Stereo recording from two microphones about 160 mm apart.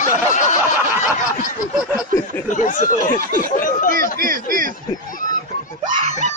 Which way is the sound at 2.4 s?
50° left (ahead or behind).